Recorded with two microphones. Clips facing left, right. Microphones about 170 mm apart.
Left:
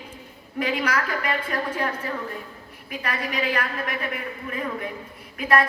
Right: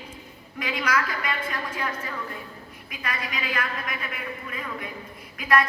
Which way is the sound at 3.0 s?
40° left (ahead or behind).